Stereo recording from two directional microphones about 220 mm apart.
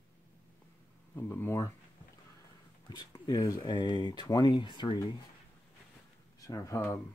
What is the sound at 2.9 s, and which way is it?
Speech, 20° left (ahead or behind).